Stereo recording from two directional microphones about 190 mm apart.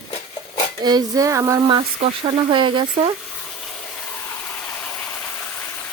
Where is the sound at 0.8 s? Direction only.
20° right (ahead or behind).